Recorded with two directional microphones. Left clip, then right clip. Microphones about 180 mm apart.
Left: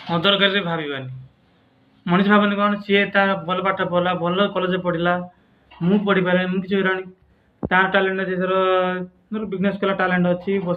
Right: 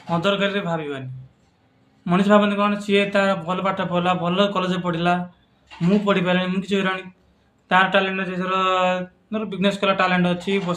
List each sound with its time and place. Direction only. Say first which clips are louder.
0.1 s speech: left 3 dB; 10° right (ahead or behind)
2.0 s speech: even; 15° right (ahead or behind)